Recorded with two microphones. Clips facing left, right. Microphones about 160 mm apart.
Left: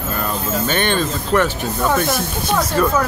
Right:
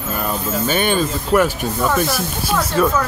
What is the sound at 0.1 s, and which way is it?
Speech, 10° right (ahead or behind).